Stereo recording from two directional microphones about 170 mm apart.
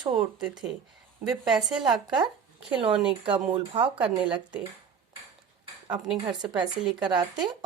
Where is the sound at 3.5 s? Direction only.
30° right (ahead or behind).